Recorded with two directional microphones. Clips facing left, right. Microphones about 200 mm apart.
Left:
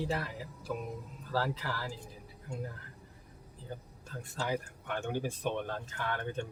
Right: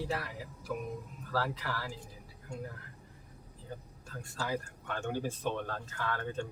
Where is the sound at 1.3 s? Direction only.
30° left (ahead or behind).